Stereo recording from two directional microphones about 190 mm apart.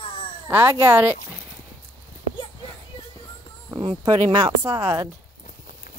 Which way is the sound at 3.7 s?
25° right (ahead or behind).